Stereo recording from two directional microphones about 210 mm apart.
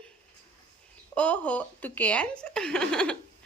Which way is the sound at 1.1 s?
5° left (ahead or behind).